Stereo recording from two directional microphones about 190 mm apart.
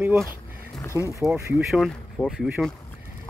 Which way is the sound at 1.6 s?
Centre (ahead or behind).